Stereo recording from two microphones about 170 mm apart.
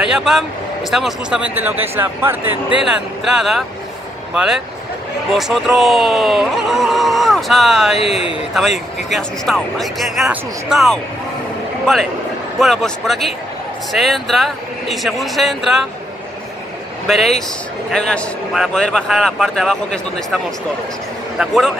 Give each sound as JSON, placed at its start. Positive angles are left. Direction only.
{"t": 0.0, "sound": "speech", "side_deg": -5}
{"t": 5.3, "sound": "speech", "side_deg": 0}
{"t": 8.0, "sound": "a man's voice", "side_deg": 35}
{"t": 8.5, "sound": "speech", "side_deg": 0}
{"t": 17.9, "sound": "speech", "side_deg": 5}
{"t": 21.4, "sound": "speech", "side_deg": 0}